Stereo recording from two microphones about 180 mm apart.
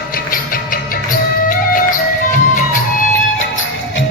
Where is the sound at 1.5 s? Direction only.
50° left (ahead or behind).